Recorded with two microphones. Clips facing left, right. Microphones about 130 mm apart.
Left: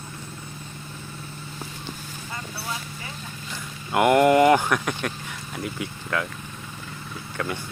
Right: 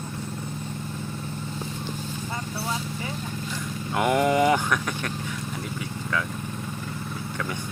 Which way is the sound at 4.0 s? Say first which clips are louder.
Left 5 dB; 5° left (ahead or behind).